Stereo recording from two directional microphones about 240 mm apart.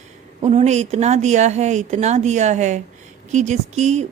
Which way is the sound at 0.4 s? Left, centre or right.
Right.